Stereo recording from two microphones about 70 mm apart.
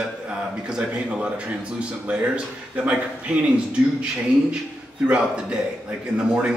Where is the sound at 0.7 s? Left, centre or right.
Centre.